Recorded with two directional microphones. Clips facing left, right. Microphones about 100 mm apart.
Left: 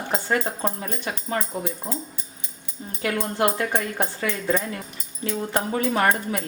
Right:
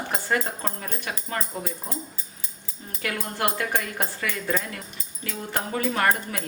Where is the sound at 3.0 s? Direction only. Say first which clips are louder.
Left 5 dB; 20° left (ahead or behind).